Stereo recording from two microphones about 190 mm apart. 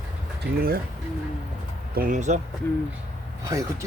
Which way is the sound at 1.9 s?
45° right (ahead or behind).